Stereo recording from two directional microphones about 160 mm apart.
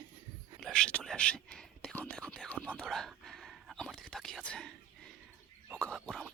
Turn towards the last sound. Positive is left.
turn(degrees=0)  # may be behind; listen again after turning